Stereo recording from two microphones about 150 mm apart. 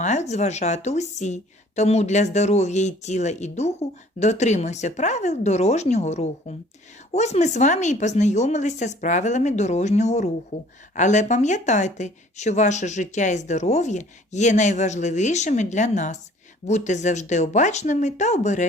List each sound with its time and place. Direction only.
0.0 s a woman's voice: 50° left (ahead or behind)